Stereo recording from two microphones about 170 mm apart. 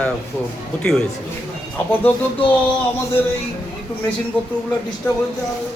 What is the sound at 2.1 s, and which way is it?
Speech, 10° left (ahead or behind).